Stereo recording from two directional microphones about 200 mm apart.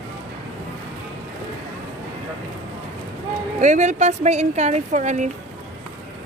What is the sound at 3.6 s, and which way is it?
Speech, 35° right (ahead or behind).